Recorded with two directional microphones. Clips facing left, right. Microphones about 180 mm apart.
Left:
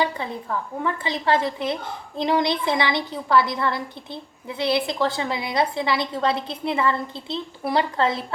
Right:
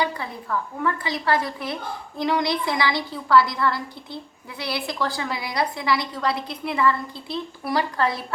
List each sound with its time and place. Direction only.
0.0 s a woman's voice: 25° left (ahead or behind)